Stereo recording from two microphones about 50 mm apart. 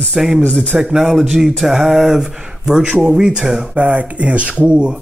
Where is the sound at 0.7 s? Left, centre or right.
Centre.